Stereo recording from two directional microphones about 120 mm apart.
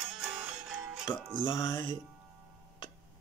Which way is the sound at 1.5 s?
25° left (ahead or behind).